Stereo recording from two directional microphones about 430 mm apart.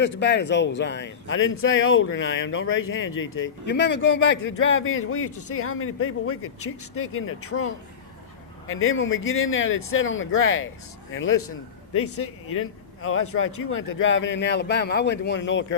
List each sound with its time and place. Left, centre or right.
0.0 s speech: left